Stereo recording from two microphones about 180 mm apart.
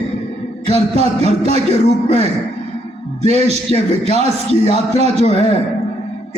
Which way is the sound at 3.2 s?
35° right (ahead or behind).